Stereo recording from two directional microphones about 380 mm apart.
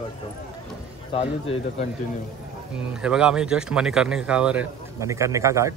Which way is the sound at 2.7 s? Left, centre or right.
Centre.